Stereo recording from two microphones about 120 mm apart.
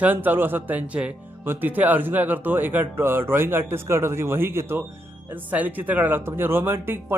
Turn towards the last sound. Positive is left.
turn(degrees=-20)  # may be behind; listen again after turning